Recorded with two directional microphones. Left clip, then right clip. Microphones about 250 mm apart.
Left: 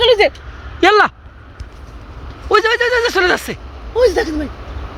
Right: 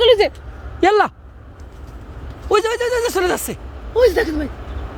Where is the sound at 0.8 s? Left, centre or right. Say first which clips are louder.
Left 4 dB; centre.